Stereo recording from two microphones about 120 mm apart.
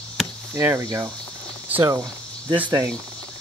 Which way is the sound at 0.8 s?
30° right (ahead or behind).